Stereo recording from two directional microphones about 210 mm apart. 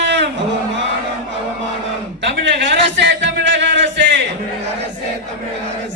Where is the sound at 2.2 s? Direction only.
55° right (ahead or behind).